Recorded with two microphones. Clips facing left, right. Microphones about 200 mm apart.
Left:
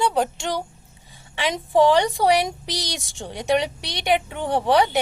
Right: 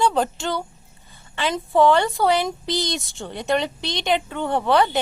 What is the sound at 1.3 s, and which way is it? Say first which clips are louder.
A woman's voice: even; 15° left (ahead or behind).